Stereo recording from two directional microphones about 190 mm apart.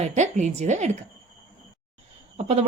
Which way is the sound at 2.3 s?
35° right (ahead or behind).